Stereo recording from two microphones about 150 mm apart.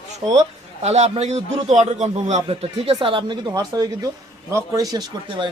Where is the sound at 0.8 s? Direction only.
45° right (ahead or behind).